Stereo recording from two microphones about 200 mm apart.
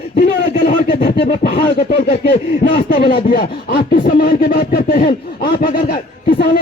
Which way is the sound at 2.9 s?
50° left (ahead or behind).